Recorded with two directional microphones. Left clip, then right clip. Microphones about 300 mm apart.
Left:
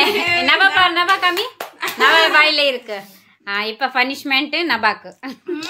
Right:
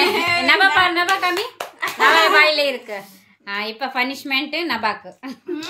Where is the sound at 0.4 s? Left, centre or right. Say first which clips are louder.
Left 1 dB; centre.